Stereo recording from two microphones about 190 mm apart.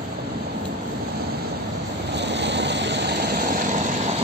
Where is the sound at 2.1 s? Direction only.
65° right (ahead or behind).